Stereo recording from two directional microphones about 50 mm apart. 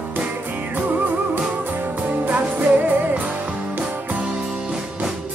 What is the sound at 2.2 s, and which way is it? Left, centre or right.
Music, right.